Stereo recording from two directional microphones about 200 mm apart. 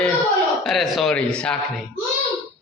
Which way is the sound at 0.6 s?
Centre (ahead or behind).